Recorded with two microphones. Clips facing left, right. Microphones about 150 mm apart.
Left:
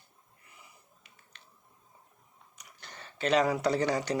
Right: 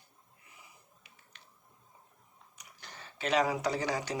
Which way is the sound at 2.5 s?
10° right (ahead or behind).